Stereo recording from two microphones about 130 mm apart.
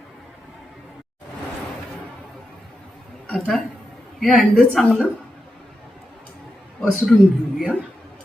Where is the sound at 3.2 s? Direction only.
5° left (ahead or behind).